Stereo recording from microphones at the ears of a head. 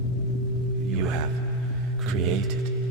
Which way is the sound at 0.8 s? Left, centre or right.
Right.